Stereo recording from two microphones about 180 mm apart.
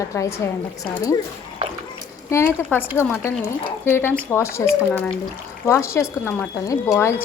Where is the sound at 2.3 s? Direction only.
15° left (ahead or behind).